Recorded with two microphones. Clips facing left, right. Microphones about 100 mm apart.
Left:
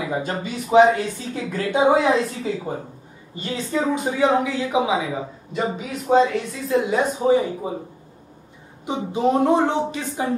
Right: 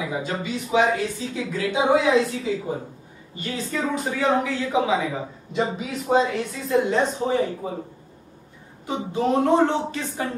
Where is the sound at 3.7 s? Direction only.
20° left (ahead or behind).